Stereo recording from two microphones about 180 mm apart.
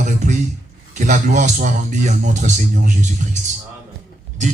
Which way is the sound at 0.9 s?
45° right (ahead or behind).